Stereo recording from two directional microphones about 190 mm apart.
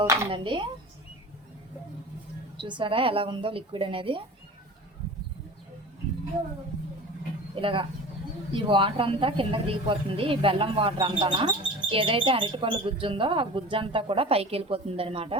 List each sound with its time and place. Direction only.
0.0 s speech: 15° right (ahead or behind)
0.3 s speech: 25° right (ahead or behind)
2.6 s speech: 25° right (ahead or behind)
7.5 s speech: 25° right (ahead or behind)